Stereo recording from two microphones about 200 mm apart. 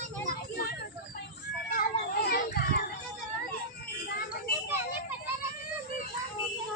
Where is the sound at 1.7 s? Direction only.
50° left (ahead or behind).